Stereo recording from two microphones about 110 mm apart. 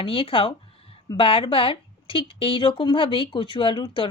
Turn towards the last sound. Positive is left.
turn(degrees=50)  # may be behind; listen again after turning